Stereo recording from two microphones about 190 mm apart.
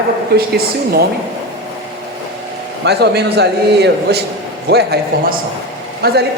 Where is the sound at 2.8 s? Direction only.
60° right (ahead or behind).